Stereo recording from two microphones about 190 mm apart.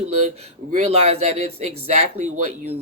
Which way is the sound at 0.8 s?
35° right (ahead or behind).